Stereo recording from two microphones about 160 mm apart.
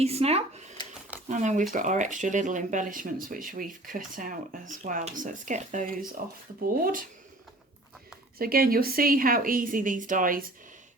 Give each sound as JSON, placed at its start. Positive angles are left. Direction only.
{"t": 0.0, "sound": "speech", "side_deg": -40}
{"t": 8.4, "sound": "speech", "side_deg": -65}